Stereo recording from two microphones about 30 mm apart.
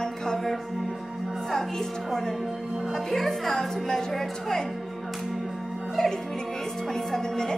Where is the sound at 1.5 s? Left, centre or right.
Centre.